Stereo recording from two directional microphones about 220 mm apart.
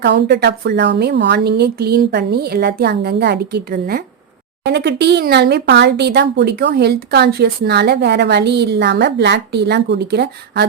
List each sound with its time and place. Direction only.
0.0 s speech: 50° right (ahead or behind)